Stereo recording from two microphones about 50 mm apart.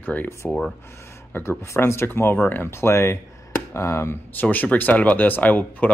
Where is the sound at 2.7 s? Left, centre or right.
Left.